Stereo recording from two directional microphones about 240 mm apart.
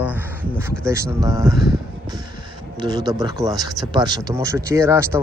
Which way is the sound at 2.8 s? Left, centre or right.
Centre.